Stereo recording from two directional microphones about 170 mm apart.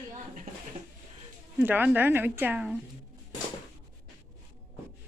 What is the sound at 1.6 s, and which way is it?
Speech, 10° right (ahead or behind).